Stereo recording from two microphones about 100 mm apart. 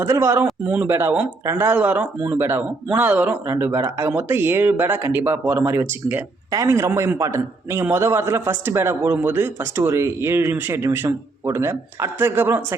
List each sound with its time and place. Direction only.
0.0 s a man's voice: 25° right (ahead or behind)